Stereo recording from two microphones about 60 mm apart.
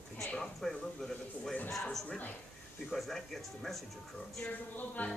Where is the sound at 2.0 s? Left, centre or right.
Left.